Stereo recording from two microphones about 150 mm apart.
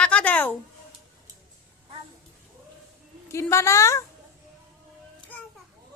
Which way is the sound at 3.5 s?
20° left (ahead or behind).